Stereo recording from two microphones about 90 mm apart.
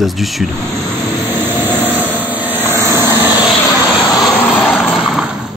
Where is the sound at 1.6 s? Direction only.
20° right (ahead or behind).